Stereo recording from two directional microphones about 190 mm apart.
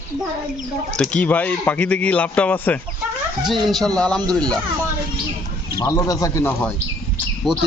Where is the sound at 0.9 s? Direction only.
5° left (ahead or behind).